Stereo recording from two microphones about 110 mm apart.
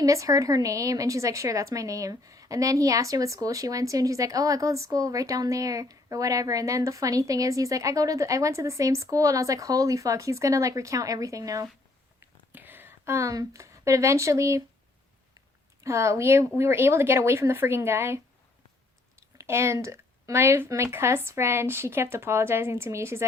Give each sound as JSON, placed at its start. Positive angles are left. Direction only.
{"t": 0.0, "sound": "a woman's voice", "side_deg": -30}
{"t": 12.2, "sound": "a sound", "side_deg": -15}
{"t": 16.6, "sound": "speech", "side_deg": -20}
{"t": 19.4, "sound": "speech", "side_deg": -25}